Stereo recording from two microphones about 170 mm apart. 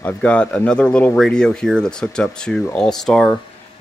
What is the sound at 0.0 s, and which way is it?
Speech, 10° left (ahead or behind).